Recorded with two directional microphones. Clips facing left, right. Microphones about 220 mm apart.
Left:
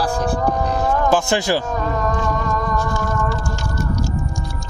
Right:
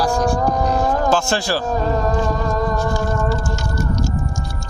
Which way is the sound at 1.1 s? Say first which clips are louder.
Left 2 dB; 20° left (ahead or behind).